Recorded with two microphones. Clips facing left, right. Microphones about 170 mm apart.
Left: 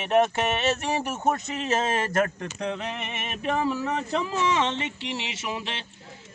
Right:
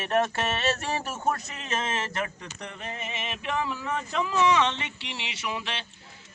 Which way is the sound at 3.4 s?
40° left (ahead or behind).